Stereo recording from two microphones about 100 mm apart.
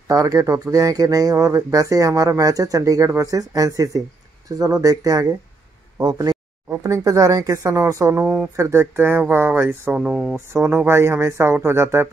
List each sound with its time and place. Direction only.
0.1 s speech: 35° right (ahead or behind)
6.7 s speech: 30° right (ahead or behind)
8.2 s speech: 15° right (ahead or behind)
8.5 s speech: 25° right (ahead or behind); by 10.3 s 10° right (ahead or behind)
10.3 s speech: 25° right (ahead or behind)